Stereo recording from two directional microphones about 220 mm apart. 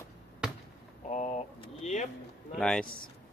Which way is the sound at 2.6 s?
5° left (ahead or behind).